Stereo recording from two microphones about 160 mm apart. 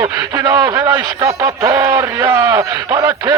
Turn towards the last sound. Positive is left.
turn(degrees=-20)  # may be behind; listen again after turning